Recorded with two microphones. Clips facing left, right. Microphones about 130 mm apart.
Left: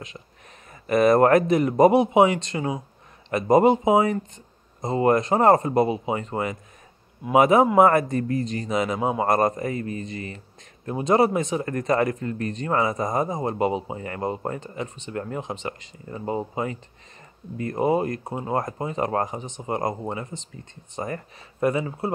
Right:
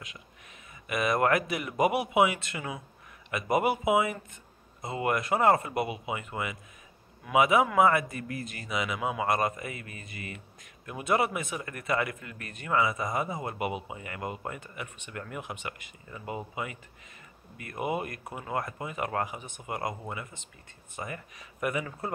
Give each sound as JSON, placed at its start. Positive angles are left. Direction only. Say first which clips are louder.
{"t": 0.8, "sound": "a man's voice", "louder": "left 9 dB", "side_deg": 40}